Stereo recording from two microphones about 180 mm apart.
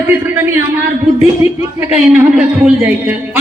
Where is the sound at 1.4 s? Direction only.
35° left (ahead or behind).